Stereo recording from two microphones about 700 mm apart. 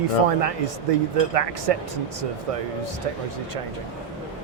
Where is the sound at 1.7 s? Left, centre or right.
Right.